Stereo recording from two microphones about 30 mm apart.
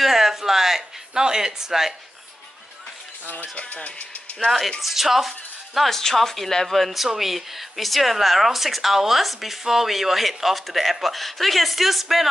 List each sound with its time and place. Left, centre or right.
0.0 s a sound: centre
1.1 s speech: right
3.5 s speech: left
4.8 s speech: centre
5.9 s speech: centre
6.8 s speech: centre